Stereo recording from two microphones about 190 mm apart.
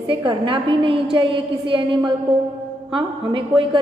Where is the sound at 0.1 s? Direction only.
25° right (ahead or behind).